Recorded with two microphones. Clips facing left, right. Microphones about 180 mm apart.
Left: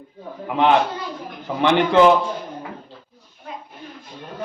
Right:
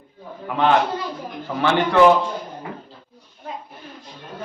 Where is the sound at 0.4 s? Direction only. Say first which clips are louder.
Left 1 dB; 20° left (ahead or behind).